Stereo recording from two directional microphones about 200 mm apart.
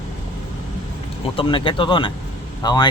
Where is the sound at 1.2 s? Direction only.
25° left (ahead or behind).